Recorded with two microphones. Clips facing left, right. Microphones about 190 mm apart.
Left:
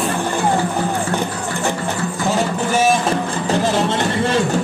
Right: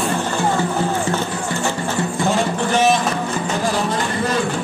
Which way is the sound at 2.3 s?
5° left (ahead or behind).